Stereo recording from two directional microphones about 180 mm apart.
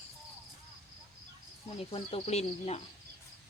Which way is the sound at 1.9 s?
30° left (ahead or behind).